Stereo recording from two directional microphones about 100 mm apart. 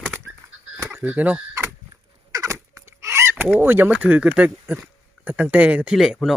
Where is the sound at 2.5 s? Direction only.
25° right (ahead or behind).